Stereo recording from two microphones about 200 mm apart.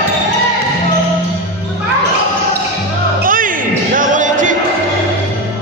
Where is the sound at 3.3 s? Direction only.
45° right (ahead or behind).